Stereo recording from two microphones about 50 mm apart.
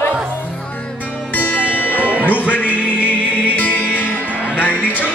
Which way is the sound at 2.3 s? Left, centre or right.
Left.